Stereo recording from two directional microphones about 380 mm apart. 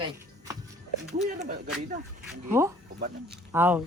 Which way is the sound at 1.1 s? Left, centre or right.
Centre.